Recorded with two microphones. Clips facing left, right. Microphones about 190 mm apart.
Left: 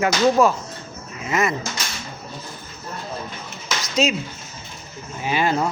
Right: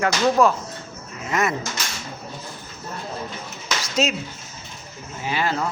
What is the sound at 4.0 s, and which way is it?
Speech, 5° right (ahead or behind).